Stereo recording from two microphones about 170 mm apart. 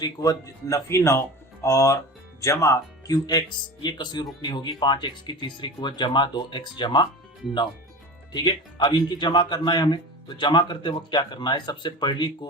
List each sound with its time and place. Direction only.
0.0 s speech: 20° left (ahead or behind)
8.3 s speech: 25° left (ahead or behind)